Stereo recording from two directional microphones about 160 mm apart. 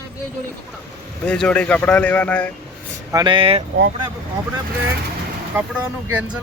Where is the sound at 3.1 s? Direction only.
30° right (ahead or behind).